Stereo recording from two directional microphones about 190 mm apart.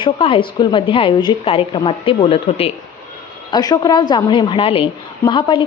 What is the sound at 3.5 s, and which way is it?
A woman's voice, 20° left (ahead or behind).